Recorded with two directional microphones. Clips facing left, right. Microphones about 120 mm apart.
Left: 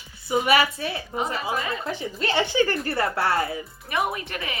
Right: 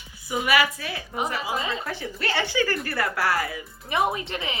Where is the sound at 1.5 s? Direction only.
25° right (ahead or behind).